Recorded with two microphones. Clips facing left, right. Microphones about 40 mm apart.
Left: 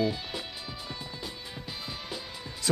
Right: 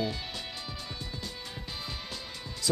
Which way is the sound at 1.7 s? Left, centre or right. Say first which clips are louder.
Left 2 dB; centre.